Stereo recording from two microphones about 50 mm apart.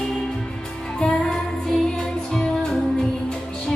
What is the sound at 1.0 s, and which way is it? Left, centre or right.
Music, centre.